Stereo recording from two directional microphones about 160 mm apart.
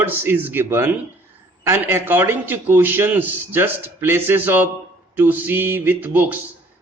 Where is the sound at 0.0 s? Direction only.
15° right (ahead or behind).